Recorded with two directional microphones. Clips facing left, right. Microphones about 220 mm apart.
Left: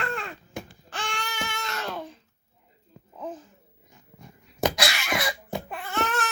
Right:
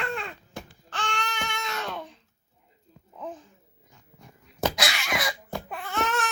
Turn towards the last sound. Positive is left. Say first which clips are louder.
# even
turn(degrees=0)  # may be behind; listen again after turning